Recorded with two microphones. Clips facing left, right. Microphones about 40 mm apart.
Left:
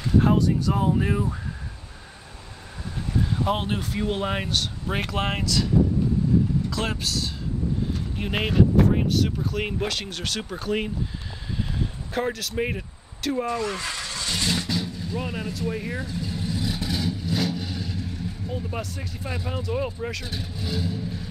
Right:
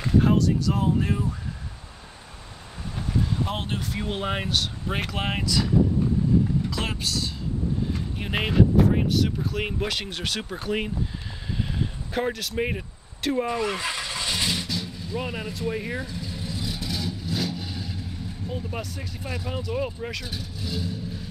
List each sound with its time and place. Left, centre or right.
0.4 s speech: centre
3.4 s speech: centre
6.7 s speech: centre
12.1 s speech: centre
13.3 s vehicle: centre
14.7 s vehicle: centre
15.1 s speech: centre
16.1 s vehicle: centre
18.4 s vehicle: right
18.9 s speech: centre
20.3 s speech: centre
20.7 s vehicle: centre